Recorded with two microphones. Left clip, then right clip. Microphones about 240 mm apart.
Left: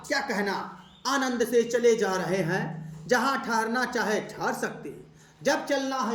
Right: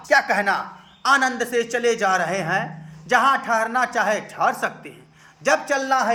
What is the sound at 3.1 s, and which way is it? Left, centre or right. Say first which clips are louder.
Music: right 8 dB; centre.